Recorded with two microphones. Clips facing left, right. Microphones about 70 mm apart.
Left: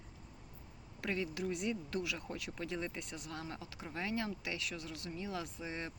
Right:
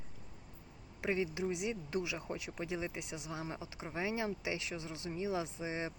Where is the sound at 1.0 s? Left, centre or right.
Centre.